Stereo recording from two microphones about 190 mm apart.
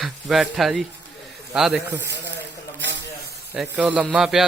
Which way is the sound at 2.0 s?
70° right (ahead or behind).